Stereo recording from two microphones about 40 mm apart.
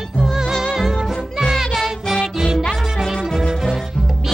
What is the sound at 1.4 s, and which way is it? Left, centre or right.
Music, centre.